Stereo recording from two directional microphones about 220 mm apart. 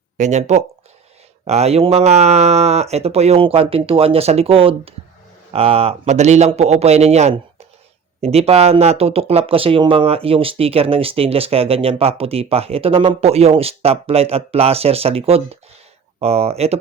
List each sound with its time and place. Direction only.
0.2 s speech: 30° right (ahead or behind)